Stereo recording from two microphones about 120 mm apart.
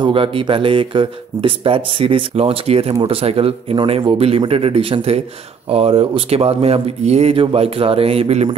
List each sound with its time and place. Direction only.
0.0 s speech: 45° right (ahead or behind)